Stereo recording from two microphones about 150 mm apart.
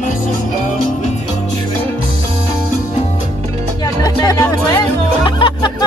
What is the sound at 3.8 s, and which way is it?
Music, 25° left (ahead or behind).